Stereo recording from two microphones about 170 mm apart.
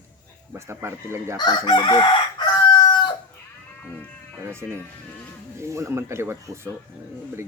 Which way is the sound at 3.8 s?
10° left (ahead or behind).